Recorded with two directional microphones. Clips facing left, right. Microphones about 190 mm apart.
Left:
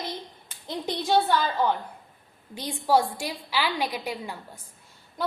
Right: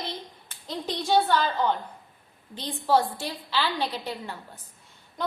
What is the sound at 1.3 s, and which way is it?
A woman's voice, 10° left (ahead or behind).